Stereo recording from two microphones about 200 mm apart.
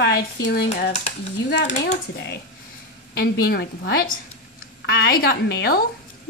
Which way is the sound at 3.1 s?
50° left (ahead or behind).